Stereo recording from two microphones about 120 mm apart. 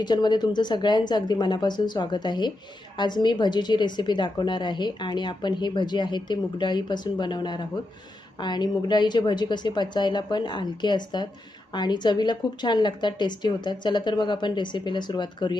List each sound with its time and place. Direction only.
0.0 s a woman's voice: 35° left (ahead or behind)